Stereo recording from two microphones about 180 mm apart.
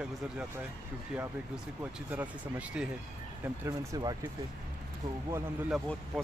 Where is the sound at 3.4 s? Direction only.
15° right (ahead or behind).